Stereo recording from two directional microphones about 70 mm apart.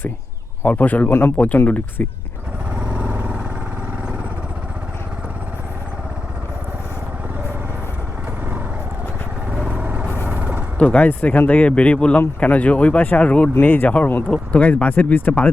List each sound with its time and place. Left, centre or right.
0.6 s speech: left
2.7 s vehicle: centre
9.5 s vehicle: centre
10.8 s speech: left